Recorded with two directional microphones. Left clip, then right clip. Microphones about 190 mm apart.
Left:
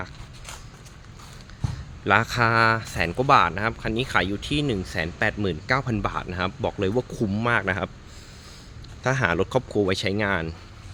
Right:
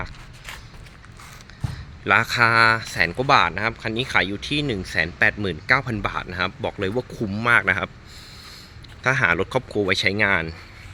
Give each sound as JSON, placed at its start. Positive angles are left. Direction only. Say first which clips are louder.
{"t": 2.0, "sound": "speech", "louder": "right 3 dB", "side_deg": 15}
{"t": 9.0, "sound": "speech", "louder": "right 4 dB", "side_deg": 15}